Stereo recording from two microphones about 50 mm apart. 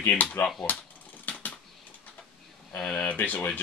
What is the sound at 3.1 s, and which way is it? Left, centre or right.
Speech, left.